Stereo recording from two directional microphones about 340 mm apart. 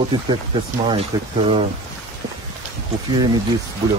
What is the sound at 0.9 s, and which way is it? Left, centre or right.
Speech, centre.